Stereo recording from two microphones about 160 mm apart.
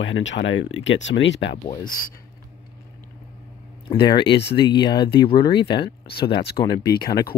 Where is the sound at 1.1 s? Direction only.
90° left.